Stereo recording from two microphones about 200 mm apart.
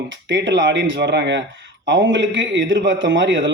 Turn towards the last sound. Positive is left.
turn(degrees=-70)  # may be behind; listen again after turning